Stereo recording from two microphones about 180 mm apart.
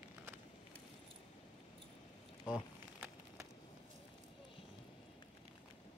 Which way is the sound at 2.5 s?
5° right (ahead or behind).